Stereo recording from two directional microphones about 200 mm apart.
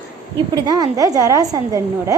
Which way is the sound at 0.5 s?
20° right (ahead or behind).